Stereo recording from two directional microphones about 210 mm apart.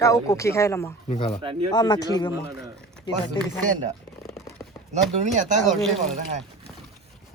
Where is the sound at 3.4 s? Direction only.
20° left (ahead or behind).